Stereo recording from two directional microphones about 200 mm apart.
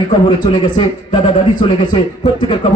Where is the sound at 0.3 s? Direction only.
25° left (ahead or behind).